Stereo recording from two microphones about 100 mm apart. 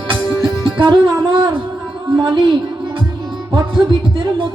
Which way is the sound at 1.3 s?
55° right (ahead or behind).